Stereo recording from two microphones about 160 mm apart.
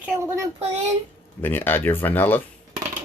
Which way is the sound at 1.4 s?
15° left (ahead or behind).